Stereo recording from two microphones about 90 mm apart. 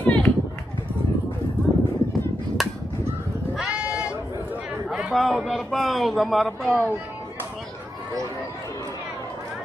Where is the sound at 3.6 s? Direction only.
10° right (ahead or behind).